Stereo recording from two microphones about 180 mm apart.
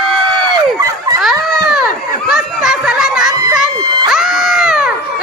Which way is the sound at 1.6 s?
Centre (ahead or behind).